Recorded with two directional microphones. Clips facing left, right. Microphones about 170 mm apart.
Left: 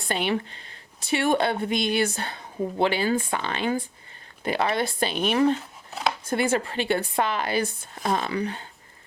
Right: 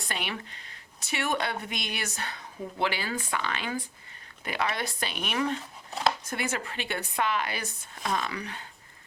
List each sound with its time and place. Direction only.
0.1 s speech: 30° left (ahead or behind)
5.9 s a sound: centre (ahead or behind)
6.2 s speech: 30° left (ahead or behind)